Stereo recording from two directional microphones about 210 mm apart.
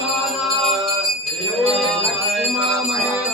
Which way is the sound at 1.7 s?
Centre (ahead or behind).